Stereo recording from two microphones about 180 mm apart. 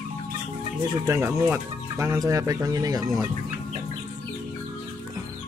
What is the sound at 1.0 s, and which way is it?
Speech, 15° right (ahead or behind).